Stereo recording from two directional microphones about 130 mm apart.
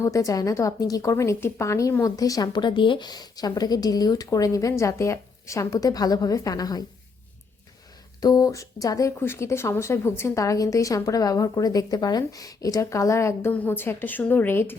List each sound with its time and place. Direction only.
0.0 s speech: 25° left (ahead or behind)
8.2 s speech: 30° left (ahead or behind)